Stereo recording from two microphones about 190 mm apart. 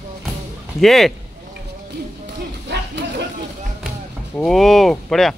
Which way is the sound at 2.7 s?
65° right (ahead or behind).